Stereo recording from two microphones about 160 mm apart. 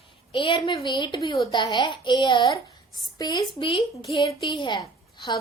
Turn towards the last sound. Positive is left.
turn(degrees=25)  # may be behind; listen again after turning